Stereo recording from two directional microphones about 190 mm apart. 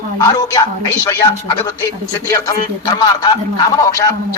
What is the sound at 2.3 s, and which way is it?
Speech, 20° left (ahead or behind).